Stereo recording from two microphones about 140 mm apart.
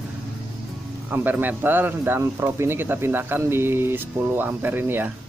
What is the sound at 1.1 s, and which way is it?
Speech, 15° right (ahead or behind).